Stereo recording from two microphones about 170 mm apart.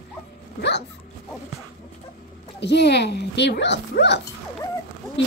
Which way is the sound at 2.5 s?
85° left.